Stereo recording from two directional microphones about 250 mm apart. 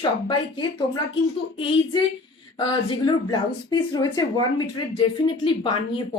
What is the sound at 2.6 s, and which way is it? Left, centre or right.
A woman's voice, centre.